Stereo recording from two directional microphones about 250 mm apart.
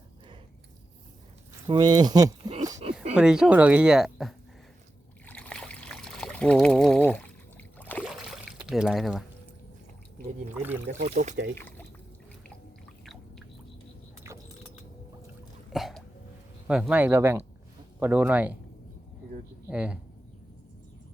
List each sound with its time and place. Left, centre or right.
1.6 s speech: centre
2.8 s a sound: right
3.2 s speech: centre
5.2 s trickle: centre
11.0 s speech: right
11.5 s drip: centre
14.3 s vehicle: centre
15.7 s throat clearing: centre
16.6 s speech: centre
19.6 s speech: centre